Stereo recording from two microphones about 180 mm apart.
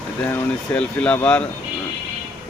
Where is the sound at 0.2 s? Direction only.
10° left (ahead or behind).